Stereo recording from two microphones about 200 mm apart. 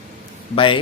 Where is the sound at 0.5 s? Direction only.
25° left (ahead or behind).